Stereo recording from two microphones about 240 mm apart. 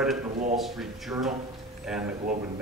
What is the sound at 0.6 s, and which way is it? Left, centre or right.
Speech, centre.